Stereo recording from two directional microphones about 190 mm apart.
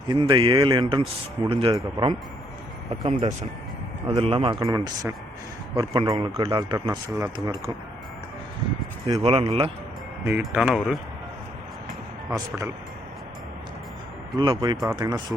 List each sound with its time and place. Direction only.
0.1 s speech: 25° right (ahead or behind)
4.6 s speech: 20° right (ahead or behind)
9.2 s speech: 30° right (ahead or behind)
10.4 s speech: 5° right (ahead or behind)
14.3 s speech: 25° right (ahead or behind)